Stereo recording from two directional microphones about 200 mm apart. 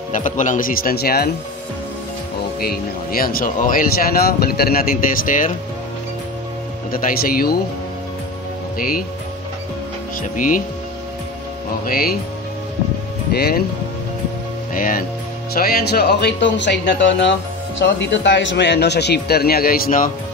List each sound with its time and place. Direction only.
0.1 s speech: 40° left (ahead or behind)
2.6 s speech: 50° left (ahead or behind)
6.9 s speech: 45° left (ahead or behind)
8.7 s speech: 45° left (ahead or behind)
10.3 s speech: 40° left (ahead or behind)
11.8 s speech: 50° left (ahead or behind)
13.3 s speech: 50° left (ahead or behind)
14.7 s speech: 45° left (ahead or behind)